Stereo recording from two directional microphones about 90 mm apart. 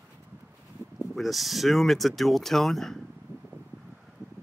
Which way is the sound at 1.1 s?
Centre (ahead or behind).